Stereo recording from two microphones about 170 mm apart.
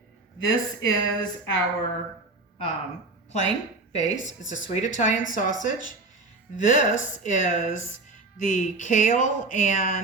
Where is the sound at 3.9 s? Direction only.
45° left (ahead or behind).